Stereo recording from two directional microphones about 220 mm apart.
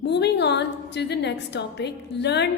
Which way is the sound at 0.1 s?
50° left (ahead or behind).